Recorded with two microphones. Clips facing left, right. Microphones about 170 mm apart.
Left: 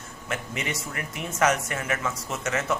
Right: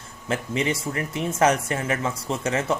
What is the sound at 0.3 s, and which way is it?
Speech, 30° right (ahead or behind).